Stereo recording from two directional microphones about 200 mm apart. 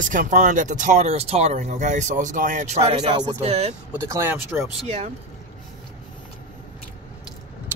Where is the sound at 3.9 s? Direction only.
15° right (ahead or behind).